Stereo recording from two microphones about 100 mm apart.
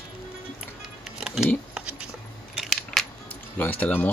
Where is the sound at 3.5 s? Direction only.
15° left (ahead or behind).